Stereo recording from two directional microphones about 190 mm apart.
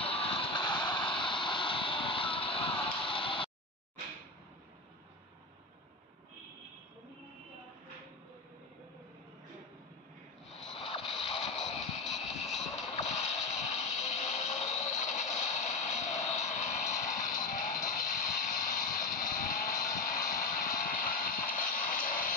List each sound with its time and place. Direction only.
0.0 s vehicle: 30° left (ahead or behind)
10.7 s a sound: 30° left (ahead or behind)
11.4 s music: centre (ahead or behind)
12.3 s music: 35° left (ahead or behind)
13.1 s a sound: 35° left (ahead or behind)
18.7 s music: 40° left (ahead or behind)